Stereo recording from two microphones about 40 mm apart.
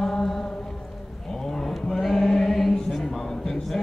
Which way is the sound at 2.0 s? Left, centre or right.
Centre.